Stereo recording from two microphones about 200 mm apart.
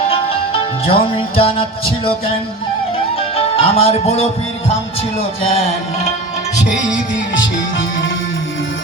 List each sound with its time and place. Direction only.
0.1 s music: 30° left (ahead or behind)
7.3 s music: 70° left (ahead or behind)